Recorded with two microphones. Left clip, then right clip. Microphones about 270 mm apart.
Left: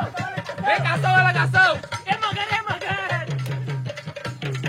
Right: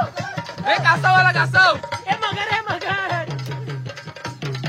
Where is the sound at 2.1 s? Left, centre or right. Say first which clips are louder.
Right 2 dB; right.